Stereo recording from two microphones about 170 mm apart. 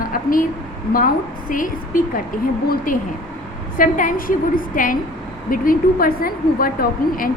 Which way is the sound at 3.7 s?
50° left (ahead or behind).